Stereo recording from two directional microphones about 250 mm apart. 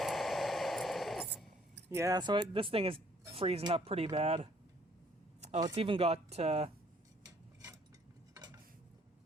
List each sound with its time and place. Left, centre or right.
0.0 s static: centre
1.9 s speech: centre
5.5 s speech: centre
8.3 s cutlery: centre